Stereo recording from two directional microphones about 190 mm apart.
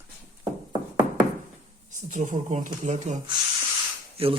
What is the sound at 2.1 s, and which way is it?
Speech, 40° right (ahead or behind).